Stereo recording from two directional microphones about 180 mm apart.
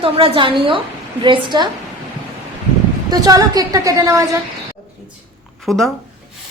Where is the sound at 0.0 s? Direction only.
30° right (ahead or behind).